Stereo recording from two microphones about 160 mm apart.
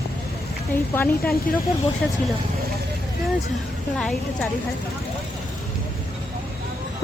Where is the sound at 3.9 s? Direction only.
5° left (ahead or behind).